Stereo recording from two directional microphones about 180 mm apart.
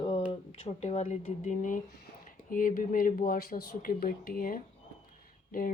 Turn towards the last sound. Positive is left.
turn(degrees=50)  # may be behind; listen again after turning